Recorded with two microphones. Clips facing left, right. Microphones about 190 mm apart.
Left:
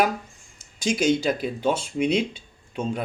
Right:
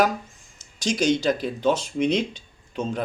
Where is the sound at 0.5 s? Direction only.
55° left (ahead or behind).